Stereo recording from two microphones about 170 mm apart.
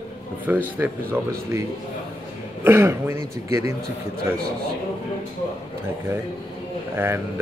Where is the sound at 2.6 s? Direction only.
15° right (ahead or behind).